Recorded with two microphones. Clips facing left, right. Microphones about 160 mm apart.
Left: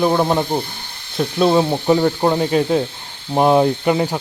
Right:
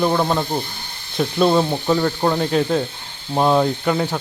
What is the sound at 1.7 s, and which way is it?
Speech, 15° left (ahead or behind).